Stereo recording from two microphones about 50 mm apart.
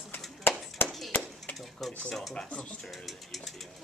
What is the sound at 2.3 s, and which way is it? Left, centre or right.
Speech, centre.